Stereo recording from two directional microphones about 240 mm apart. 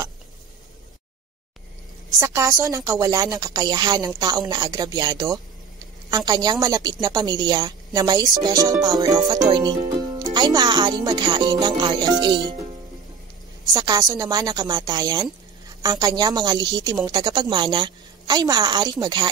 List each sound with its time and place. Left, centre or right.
2.0 s a woman's voice: centre
13.7 s a woman's voice: centre